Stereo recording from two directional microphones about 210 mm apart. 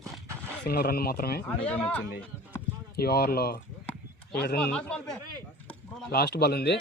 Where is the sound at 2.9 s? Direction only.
50° left (ahead or behind).